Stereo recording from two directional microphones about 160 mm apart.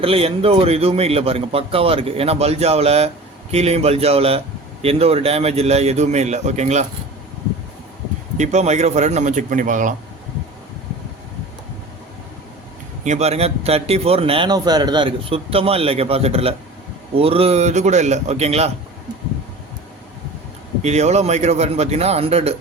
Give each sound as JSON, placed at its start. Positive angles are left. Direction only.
{"t": 0.0, "sound": "a man's voice", "side_deg": -35}
{"t": 8.4, "sound": "a man's voice", "side_deg": -45}
{"t": 13.1, "sound": "a man's voice", "side_deg": -40}
{"t": 20.8, "sound": "a man's voice", "side_deg": -45}